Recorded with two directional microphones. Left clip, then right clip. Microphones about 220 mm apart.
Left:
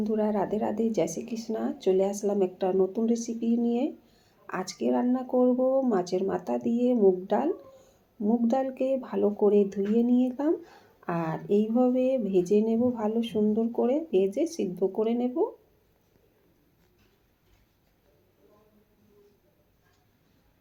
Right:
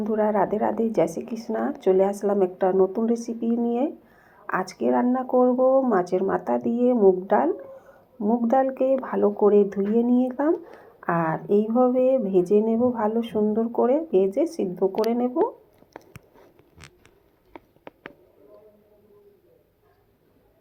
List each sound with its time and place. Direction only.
0.0 s speech: centre (ahead or behind)